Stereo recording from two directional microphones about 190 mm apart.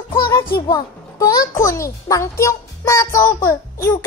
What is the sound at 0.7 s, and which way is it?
A child's voice, 20° left (ahead or behind).